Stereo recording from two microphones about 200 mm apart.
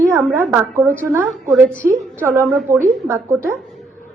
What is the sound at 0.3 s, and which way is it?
Speech, 10° right (ahead or behind).